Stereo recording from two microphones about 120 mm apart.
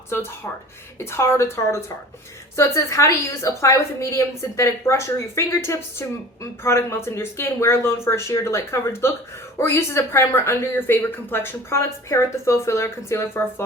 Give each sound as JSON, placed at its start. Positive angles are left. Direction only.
{"t": 0.1, "sound": "a woman's voice", "side_deg": 20}